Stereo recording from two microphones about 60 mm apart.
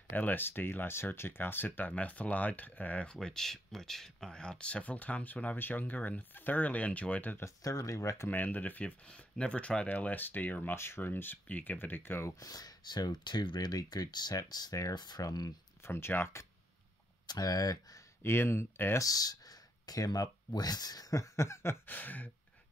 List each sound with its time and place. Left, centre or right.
0.1 s speech: left
1.9 s speech: left
3.2 s speech: centre; by 7.3 s left
7.6 s speech: left
8.3 s speech: left
12.3 s speech: left
15.8 s speech: left
17.4 s speech: left
18.2 s speech: left
18.9 s speech: left
21.8 s speech: left